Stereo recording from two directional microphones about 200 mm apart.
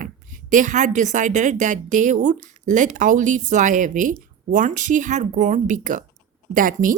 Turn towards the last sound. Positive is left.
turn(degrees=-45)  # may be behind; listen again after turning